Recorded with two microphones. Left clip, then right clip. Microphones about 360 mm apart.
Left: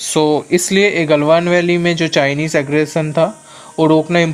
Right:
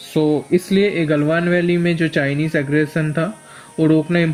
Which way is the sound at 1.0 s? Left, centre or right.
Left.